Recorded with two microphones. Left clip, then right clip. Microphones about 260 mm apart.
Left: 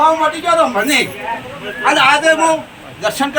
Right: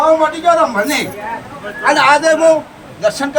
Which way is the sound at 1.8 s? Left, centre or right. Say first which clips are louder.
Right 1 dB; centre.